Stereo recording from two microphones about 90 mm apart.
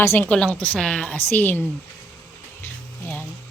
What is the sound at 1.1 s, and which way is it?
Speech, 20° left (ahead or behind).